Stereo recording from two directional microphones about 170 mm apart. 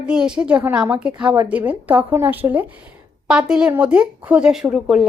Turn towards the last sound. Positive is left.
turn(degrees=0)  # may be behind; listen again after turning